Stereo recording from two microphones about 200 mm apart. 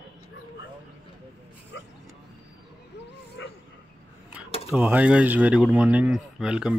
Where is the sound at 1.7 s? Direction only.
60° left (ahead or behind).